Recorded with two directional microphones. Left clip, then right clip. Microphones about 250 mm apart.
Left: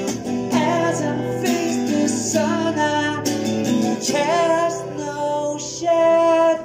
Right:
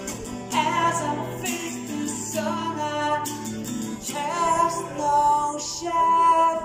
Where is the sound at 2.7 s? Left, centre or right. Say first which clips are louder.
Left 5 dB; centre.